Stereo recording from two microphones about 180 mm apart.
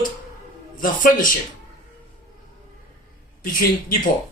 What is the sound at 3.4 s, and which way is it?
Speech, 50° left (ahead or behind).